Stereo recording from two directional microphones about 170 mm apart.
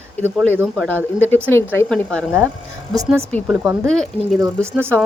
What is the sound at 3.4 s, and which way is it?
Speech, 5° right (ahead or behind).